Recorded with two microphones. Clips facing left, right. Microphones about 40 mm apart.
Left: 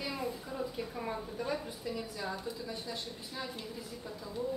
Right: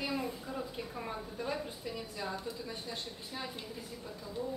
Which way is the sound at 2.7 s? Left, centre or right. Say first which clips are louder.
Left 1 dB; right.